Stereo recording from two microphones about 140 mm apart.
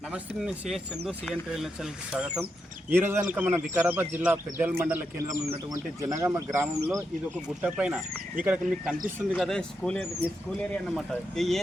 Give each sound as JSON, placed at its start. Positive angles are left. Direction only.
{"t": 0.1, "sound": "speech", "side_deg": -5}
{"t": 5.4, "sound": "speech", "side_deg": -25}
{"t": 7.6, "sound": "speech", "side_deg": -5}